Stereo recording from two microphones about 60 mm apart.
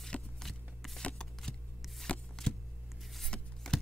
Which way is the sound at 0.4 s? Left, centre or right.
Centre.